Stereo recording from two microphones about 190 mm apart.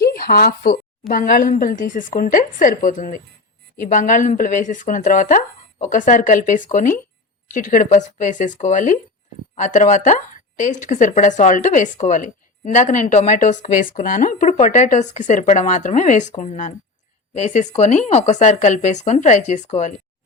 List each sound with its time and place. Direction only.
0.0 s a woman's voice: 55° left (ahead or behind); by 19.9 s 40° left (ahead or behind)